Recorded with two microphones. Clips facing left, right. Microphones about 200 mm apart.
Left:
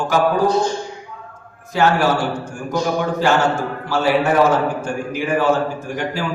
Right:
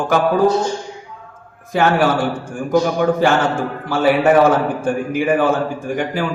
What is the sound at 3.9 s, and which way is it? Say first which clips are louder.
A man's voice: right 4 dB; 55° right (ahead or behind).